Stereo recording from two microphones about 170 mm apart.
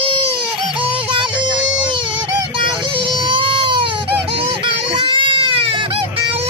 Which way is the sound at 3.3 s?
30° right (ahead or behind).